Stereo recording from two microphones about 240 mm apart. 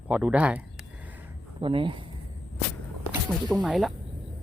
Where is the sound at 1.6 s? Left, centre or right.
Right.